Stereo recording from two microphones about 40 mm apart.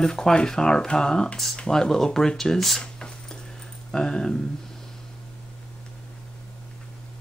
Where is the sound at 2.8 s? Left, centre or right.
Left.